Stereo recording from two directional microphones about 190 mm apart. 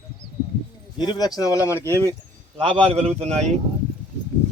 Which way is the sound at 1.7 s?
15° right (ahead or behind).